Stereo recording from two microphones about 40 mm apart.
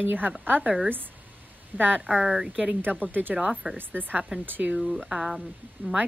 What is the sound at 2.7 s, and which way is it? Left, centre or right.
Speech, right.